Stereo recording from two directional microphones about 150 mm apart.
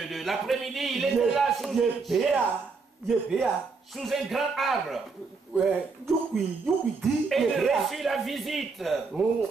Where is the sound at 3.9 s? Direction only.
Centre (ahead or behind).